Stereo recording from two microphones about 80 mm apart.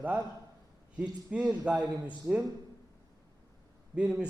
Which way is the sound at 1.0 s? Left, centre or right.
Centre.